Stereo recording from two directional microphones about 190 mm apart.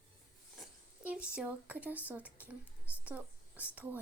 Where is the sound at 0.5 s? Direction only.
5° right (ahead or behind).